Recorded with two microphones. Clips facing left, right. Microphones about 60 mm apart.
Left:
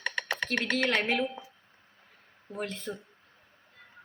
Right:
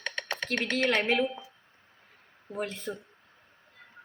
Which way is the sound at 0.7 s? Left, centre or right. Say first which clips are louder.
Right 3 dB; centre.